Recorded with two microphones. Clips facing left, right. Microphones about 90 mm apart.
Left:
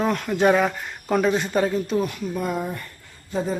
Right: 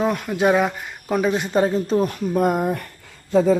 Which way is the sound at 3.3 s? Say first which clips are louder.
Right 9 dB; 90° right.